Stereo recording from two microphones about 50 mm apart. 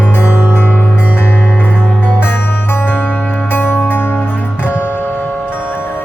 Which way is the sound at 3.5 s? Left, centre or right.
Left.